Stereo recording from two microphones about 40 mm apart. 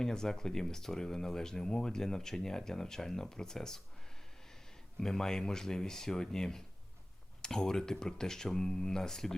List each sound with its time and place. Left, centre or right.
0.0 s speech: centre
4.9 s speech: centre